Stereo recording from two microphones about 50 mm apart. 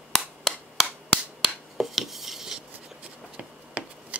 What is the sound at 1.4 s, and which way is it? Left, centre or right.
Finger snapping, centre.